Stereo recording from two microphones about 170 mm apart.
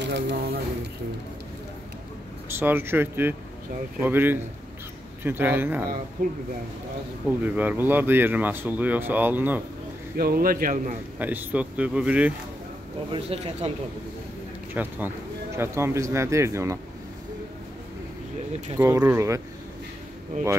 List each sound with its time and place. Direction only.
0.0 s speech: 85° right
2.6 s speech: 15° right (ahead or behind)
7.2 s speech: 10° right (ahead or behind)
10.1 s speech: 60° right (ahead or behind)
11.1 s speech: 10° right (ahead or behind)
13.1 s speech: 35° right (ahead or behind)
14.7 s speech: 10° right (ahead or behind)
18.8 s speech: 15° right (ahead or behind)